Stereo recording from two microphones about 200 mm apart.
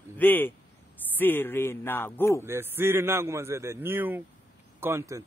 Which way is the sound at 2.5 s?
10° right (ahead or behind).